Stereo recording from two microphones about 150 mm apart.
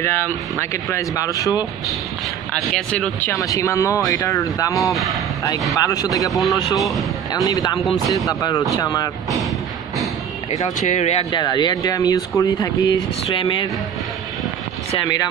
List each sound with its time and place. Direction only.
0.0 s speech: 15° left (ahead or behind)
2.7 s speech: 5° left (ahead or behind); by 4.7 s 25° left (ahead or behind)
5.8 s speech: 25° left (ahead or behind)
6.3 s speech: centre (ahead or behind)
7.4 s speech: 25° left (ahead or behind)
10.6 s speech: 50° left (ahead or behind)
11.3 s speech: 30° left (ahead or behind)